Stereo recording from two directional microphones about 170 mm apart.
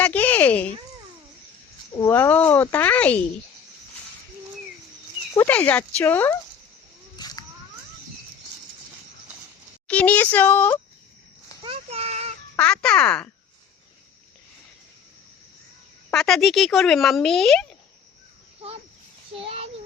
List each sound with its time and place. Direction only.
0.0 s a sound: 10° left (ahead or behind)
2.0 s speech: 15° left (ahead or behind)
5.3 s speech: 15° left (ahead or behind)
7.2 s a sound: 25° left (ahead or behind)
9.8 s speech: 10° left (ahead or behind)
11.6 s a sound: 35° right (ahead or behind)
12.5 s speech: 5° left (ahead or behind)
16.1 s speech: centre (ahead or behind)
19.4 s child singing: 35° right (ahead or behind)